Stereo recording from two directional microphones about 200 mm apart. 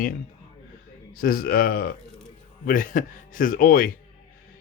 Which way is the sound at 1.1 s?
45° left (ahead or behind).